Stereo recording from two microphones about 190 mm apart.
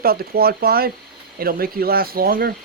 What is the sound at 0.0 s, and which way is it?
Speech, 55° right (ahead or behind).